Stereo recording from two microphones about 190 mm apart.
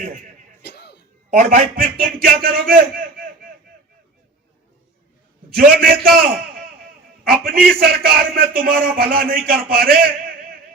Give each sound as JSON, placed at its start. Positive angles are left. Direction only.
{"t": 0.6, "sound": "music", "side_deg": 60}
{"t": 1.3, "sound": "a man's voice", "side_deg": -45}
{"t": 5.5, "sound": "a man's voice", "side_deg": -50}